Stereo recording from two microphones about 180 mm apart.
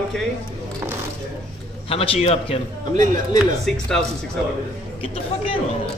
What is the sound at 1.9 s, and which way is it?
Speech, 30° left (ahead or behind).